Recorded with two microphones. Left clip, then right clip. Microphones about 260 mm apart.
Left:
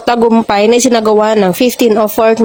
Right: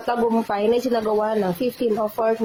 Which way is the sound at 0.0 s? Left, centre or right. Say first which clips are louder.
Left 11 dB; left.